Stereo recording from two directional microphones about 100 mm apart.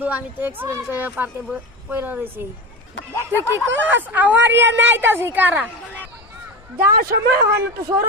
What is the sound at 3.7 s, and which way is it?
A woman's voice, 20° right (ahead or behind).